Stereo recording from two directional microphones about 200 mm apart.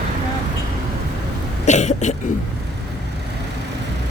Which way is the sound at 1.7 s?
35° left (ahead or behind).